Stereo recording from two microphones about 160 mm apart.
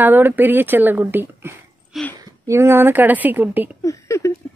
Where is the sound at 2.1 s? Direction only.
20° right (ahead or behind).